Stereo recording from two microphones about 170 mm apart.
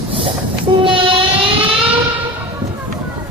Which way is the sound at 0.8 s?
30° right (ahead or behind).